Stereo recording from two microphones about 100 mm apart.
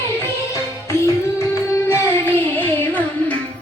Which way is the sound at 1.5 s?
30° left (ahead or behind).